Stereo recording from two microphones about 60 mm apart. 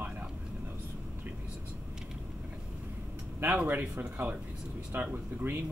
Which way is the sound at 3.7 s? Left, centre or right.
Right.